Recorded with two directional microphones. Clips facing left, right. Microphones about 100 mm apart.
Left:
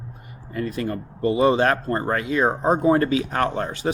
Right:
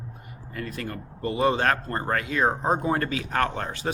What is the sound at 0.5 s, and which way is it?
Speech, 15° left (ahead or behind).